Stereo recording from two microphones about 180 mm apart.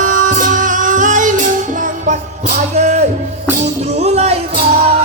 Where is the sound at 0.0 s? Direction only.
45° right (ahead or behind).